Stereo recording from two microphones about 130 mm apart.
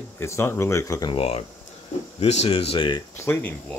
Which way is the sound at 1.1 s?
50° left (ahead or behind).